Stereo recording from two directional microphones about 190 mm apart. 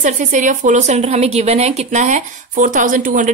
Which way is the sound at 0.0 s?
40° right (ahead or behind).